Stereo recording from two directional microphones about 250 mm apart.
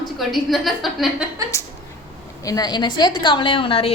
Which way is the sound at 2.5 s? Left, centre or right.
Centre.